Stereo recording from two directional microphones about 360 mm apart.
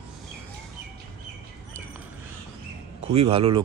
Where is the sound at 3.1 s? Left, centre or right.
Centre.